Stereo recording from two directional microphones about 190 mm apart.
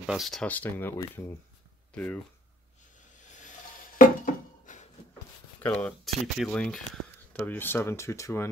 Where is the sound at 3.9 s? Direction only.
40° left (ahead or behind).